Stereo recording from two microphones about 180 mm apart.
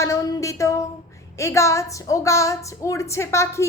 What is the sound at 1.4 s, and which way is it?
A woman's voice, 15° left (ahead or behind).